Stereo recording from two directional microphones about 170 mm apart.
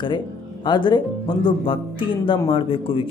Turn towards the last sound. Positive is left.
turn(degrees=30)  # may be behind; listen again after turning